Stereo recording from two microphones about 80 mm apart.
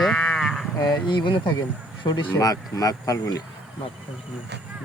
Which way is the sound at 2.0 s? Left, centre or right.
Left.